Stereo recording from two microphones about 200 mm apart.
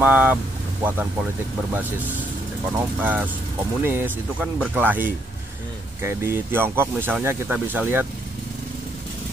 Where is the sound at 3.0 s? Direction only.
10° right (ahead or behind).